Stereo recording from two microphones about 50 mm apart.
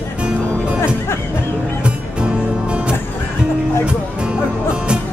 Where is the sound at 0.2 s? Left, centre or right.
Right.